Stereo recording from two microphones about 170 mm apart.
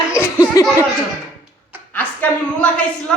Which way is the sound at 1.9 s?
10° left (ahead or behind).